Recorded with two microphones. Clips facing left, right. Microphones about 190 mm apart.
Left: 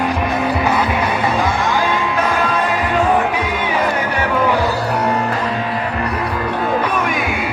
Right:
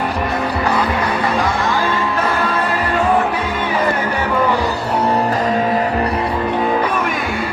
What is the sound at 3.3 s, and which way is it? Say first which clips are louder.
Music: even; 10° left (ahead or behind).